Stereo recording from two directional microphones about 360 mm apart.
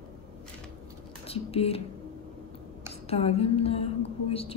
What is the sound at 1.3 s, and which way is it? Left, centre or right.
Music, centre.